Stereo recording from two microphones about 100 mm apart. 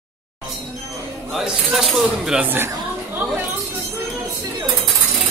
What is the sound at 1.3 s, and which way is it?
Music, 5° right (ahead or behind).